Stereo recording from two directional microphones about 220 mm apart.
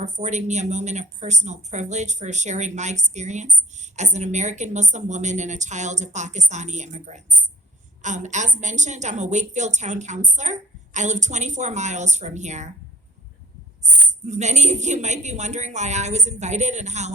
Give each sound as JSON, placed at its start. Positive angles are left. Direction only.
{"t": 0.0, "sound": "speech", "side_deg": -30}
{"t": 14.3, "sound": "speech", "side_deg": -30}